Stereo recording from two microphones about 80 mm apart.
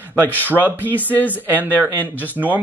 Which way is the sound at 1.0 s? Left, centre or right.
Left.